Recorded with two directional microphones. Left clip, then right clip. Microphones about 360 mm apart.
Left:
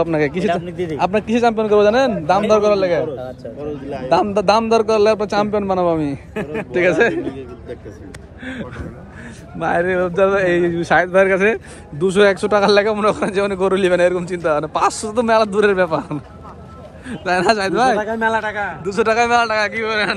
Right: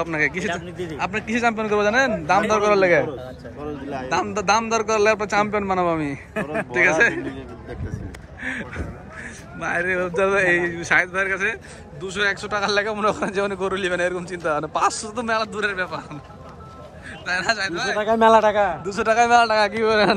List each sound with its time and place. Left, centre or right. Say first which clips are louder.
0.0 s speech: left 5 dB; centre
0.7 s speech: left 7 dB; left
0.9 s speech: left 7 dB; centre
4.1 s speech: left 6 dB; centre
8.5 s speech: even; centre
18.3 s a man's voice: right 5 dB; right
18.9 s a man's voice: left 5 dB; centre